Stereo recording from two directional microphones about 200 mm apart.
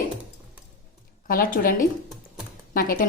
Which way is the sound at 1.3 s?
45° left (ahead or behind).